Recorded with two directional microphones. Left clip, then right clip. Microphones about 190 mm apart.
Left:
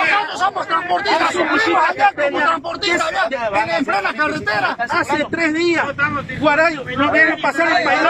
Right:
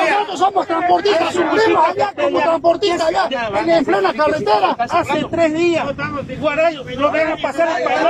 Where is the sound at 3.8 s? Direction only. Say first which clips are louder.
Right 3 dB; 25° right (ahead or behind).